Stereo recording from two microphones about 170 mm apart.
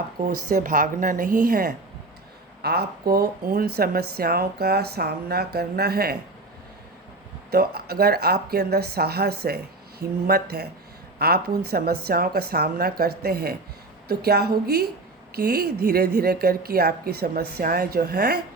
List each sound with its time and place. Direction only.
0.3 s speech: 55° right (ahead or behind)
2.6 s speech: 70° right (ahead or behind)
7.5 s a woman's voice: 65° right (ahead or behind)